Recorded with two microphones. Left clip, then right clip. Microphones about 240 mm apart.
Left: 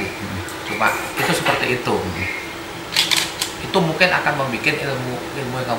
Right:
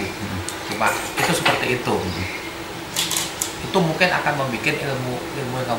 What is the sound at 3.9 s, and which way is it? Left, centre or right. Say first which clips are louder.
Speech: left 4 dB; centre.